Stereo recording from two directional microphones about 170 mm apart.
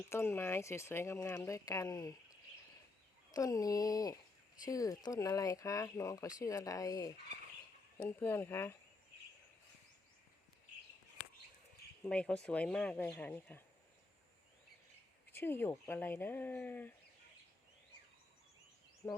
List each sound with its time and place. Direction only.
0.1 s speech: 15° left (ahead or behind)
3.3 s speech: 20° left (ahead or behind)
12.0 s speech: 5° left (ahead or behind)
15.3 s speech: 15° left (ahead or behind)
19.0 s speech: 10° left (ahead or behind)